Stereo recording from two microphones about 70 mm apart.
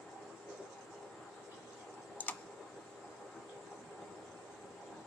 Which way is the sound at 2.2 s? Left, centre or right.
Left.